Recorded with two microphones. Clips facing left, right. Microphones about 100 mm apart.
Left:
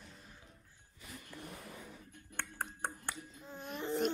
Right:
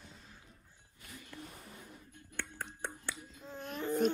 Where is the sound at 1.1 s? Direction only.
60° left (ahead or behind).